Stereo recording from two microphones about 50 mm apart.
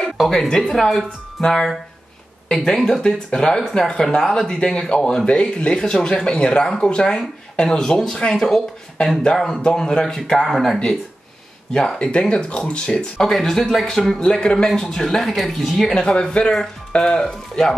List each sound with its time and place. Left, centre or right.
0.2 s speech: centre
5.2 s speech: left
10.4 s speech: centre
12.0 s speech: left
13.2 s speech: centre
15.9 s speech: centre